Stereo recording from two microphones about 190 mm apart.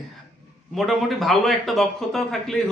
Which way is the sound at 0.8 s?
Centre (ahead or behind).